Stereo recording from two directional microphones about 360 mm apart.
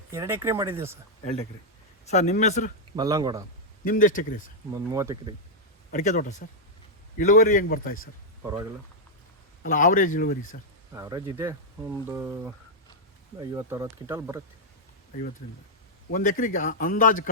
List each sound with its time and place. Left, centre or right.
0.1 s speech: centre
2.0 s a man's voice: centre
2.9 s speech: centre
3.8 s a man's voice: left
4.7 s speech: centre
5.9 s a man's voice: left
9.6 s a man's voice: left
10.9 s speech: centre
13.4 s speech: centre
16.0 s a man's voice: left